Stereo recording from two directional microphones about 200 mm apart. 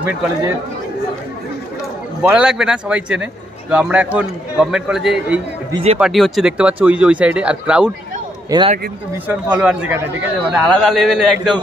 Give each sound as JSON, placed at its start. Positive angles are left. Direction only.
{"t": 2.2, "sound": "a man's voice", "side_deg": -5}
{"t": 5.7, "sound": "speech", "side_deg": -30}
{"t": 5.9, "sound": "a man's voice", "side_deg": 0}
{"t": 8.5, "sound": "speech", "side_deg": -20}
{"t": 9.3, "sound": "a man's voice", "side_deg": -5}